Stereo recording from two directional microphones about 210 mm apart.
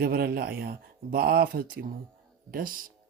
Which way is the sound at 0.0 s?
45° right (ahead or behind).